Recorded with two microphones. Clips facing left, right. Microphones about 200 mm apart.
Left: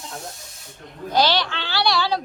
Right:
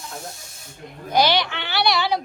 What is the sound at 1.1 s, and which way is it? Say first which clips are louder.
Speech: right 1 dB; 15° right (ahead or behind).